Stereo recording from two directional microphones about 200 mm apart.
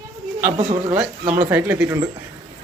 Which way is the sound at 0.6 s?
25° right (ahead or behind).